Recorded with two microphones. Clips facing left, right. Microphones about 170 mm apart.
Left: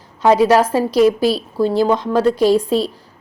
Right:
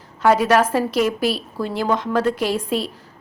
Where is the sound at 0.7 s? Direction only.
35° left (ahead or behind).